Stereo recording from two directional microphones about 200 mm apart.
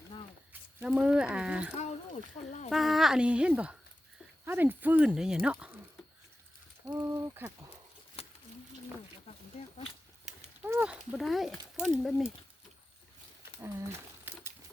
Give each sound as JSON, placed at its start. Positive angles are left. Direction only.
{"t": 0.8, "sound": "speech", "side_deg": -5}
{"t": 1.8, "sound": "speech", "side_deg": 35}
{"t": 2.6, "sound": "speech", "side_deg": 0}
{"t": 6.8, "sound": "speech", "side_deg": -15}
{"t": 8.2, "sound": "a sound", "side_deg": 30}
{"t": 10.6, "sound": "speech", "side_deg": -10}